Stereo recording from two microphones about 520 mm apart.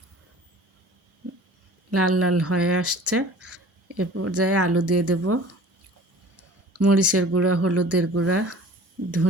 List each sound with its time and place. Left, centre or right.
1.9 s speech: right
6.7 s speech: right